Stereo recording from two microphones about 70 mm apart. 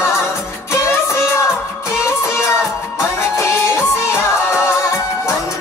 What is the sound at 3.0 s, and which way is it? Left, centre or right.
Music, left.